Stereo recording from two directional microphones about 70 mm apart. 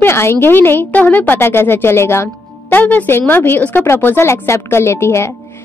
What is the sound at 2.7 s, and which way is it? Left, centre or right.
A woman's voice, left.